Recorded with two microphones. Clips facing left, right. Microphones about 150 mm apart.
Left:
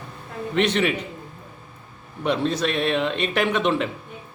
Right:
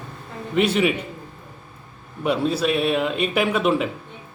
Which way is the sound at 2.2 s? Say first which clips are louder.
Right 1 dB; 10° right (ahead or behind).